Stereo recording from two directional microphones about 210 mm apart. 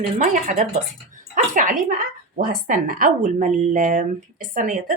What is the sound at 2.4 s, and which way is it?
Speech, 40° right (ahead or behind).